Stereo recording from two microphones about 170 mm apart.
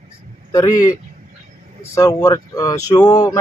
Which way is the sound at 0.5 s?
20° left (ahead or behind).